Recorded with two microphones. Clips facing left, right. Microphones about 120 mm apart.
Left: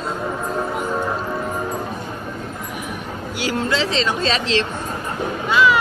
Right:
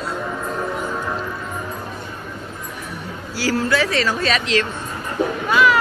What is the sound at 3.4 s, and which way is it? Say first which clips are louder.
Speech: right 2 dB; 20° left (ahead or behind).